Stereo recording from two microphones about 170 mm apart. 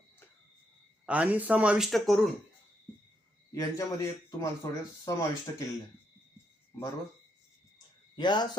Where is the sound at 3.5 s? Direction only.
20° left (ahead or behind).